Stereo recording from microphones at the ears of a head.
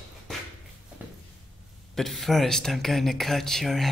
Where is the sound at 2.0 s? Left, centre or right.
Centre.